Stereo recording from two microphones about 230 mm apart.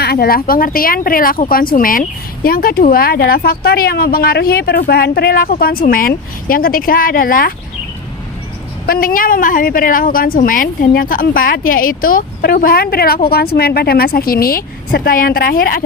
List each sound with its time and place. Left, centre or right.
0.0 s speech: left
8.9 s speech: left